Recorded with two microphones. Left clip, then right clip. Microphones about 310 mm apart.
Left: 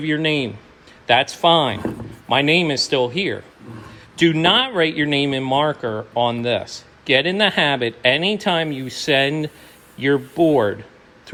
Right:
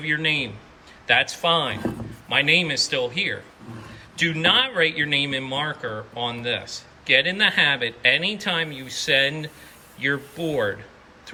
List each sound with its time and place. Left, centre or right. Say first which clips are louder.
0.0 s speech: left 3 dB; centre